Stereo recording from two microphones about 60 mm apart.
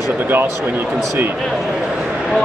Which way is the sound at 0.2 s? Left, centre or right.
Right.